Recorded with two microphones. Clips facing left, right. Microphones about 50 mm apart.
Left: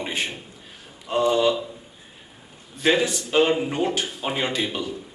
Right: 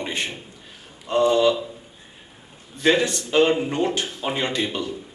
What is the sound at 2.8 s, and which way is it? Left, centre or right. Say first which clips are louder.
A man's voice: right 1 dB; centre.